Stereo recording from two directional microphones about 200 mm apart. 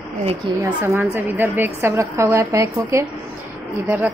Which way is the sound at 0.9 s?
10° right (ahead or behind).